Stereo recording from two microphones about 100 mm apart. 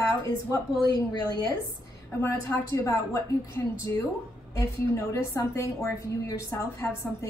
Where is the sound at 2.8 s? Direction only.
30° left (ahead or behind).